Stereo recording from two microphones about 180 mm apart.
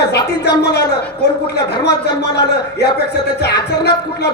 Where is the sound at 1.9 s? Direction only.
20° left (ahead or behind).